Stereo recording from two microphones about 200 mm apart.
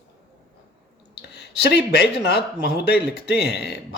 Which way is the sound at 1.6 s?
55° left (ahead or behind).